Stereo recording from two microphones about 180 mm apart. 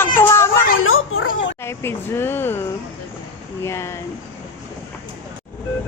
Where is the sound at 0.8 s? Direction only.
90° left.